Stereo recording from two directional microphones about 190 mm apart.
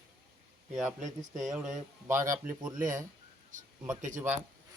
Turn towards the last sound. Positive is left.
turn(degrees=-40)  # may be behind; listen again after turning